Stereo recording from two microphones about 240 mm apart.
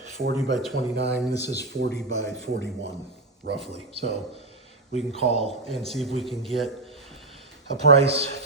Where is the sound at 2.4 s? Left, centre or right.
Left.